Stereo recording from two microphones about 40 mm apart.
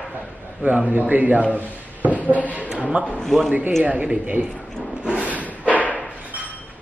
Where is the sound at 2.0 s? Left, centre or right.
Right.